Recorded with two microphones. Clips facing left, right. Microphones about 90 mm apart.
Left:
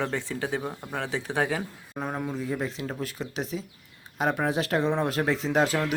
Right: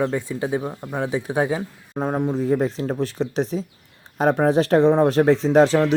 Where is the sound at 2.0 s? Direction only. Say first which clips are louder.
Right 9 dB; 30° right (ahead or behind).